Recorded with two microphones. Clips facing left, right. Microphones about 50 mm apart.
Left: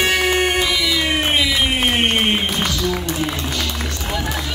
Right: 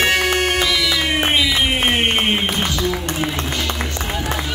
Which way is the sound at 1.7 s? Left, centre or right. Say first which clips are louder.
Even; centre.